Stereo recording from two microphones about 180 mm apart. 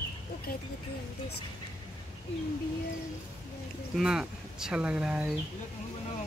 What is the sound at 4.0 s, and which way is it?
Speech, 5° right (ahead or behind).